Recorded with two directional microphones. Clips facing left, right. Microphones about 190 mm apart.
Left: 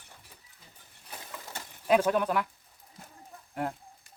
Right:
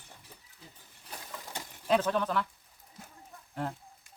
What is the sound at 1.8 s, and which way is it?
Speech, 10° left (ahead or behind).